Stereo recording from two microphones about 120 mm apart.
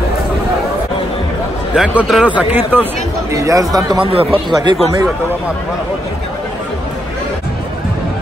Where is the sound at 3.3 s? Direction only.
30° right (ahead or behind).